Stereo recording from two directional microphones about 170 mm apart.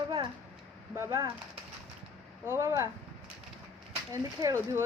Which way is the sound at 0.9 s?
15° right (ahead or behind).